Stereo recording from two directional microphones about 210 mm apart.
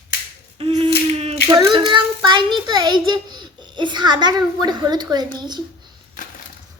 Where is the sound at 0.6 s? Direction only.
25° right (ahead or behind).